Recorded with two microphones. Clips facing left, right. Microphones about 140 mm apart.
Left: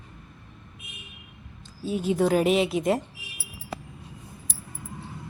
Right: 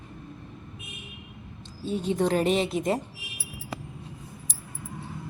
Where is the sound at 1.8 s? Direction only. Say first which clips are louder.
Left 2 dB; 5° left (ahead or behind).